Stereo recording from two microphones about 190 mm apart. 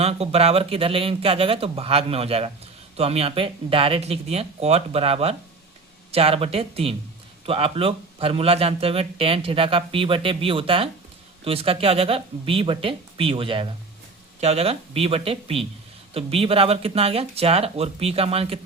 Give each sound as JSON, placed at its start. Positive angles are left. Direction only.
{"t": 0.0, "sound": "speech", "side_deg": -30}